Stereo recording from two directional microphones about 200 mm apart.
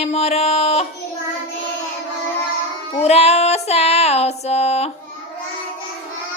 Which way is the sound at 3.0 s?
30° left (ahead or behind).